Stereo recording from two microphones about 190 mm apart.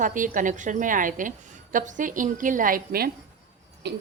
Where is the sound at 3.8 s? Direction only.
65° right (ahead or behind).